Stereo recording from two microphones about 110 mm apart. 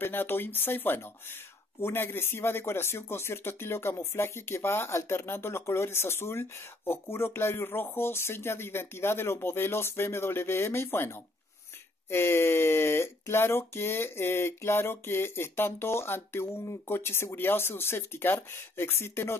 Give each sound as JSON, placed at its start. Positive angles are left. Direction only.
{"t": 0.0, "sound": "speech", "side_deg": 20}